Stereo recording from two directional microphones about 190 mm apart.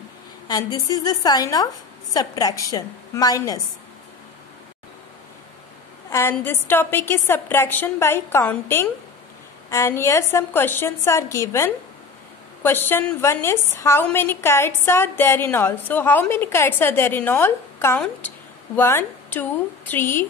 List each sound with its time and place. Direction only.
0.5 s a woman's voice: 20° left (ahead or behind)
6.0 s a woman's voice: 15° left (ahead or behind)